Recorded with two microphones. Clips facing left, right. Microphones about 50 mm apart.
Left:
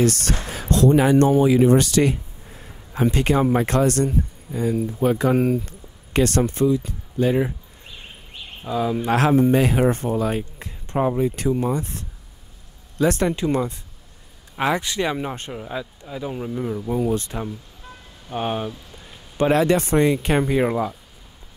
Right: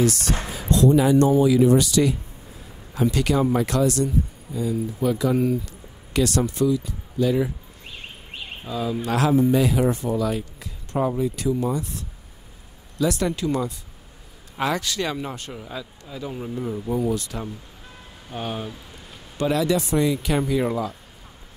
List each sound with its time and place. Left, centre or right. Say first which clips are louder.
0.0 s speech: left 1 dB; left
2.6 s speech: left 2 dB; left
8.6 s speech: left 4 dB; left
9.1 s speech: left 2 dB; left
13.0 s speech: left 3 dB; left; by 17.0 s centre
17.0 s speech: left 2 dB; left
19.3 s speech: left 4 dB; left